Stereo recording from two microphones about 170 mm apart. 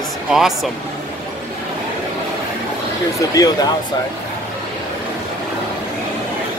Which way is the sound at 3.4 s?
20° left (ahead or behind).